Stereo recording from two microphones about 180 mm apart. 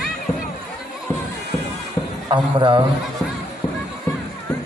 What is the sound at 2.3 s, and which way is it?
Speech, 30° right (ahead or behind).